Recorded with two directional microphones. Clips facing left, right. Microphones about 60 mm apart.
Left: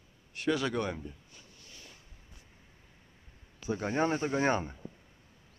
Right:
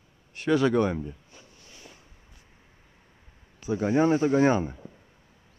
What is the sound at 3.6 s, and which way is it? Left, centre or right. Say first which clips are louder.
A man's voice: right 7 dB; centre.